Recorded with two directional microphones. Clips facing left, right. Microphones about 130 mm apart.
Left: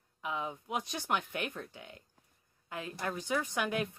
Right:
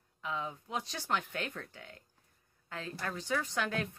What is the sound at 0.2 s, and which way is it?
A woman's voice, 15° left (ahead or behind).